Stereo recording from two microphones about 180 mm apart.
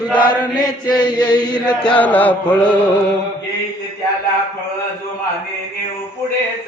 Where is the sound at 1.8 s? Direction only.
5° left (ahead or behind).